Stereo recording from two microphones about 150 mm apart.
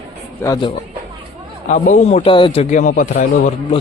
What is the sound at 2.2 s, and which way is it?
Speech, 35° left (ahead or behind).